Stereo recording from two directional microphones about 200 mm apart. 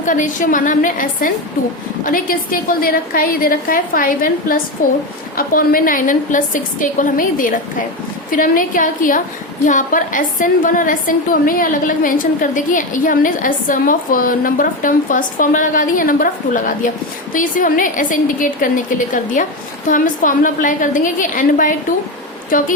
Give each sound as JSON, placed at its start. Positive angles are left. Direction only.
{"t": 0.0, "sound": "a woman's voice", "side_deg": 40}